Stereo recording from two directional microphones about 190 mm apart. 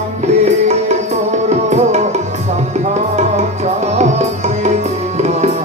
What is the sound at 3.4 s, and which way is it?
Music, 35° right (ahead or behind).